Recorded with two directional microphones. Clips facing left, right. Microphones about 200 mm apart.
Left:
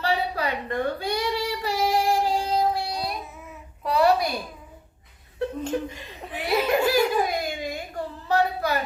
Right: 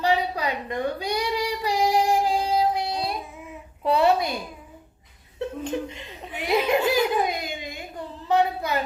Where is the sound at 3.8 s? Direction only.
25° right (ahead or behind).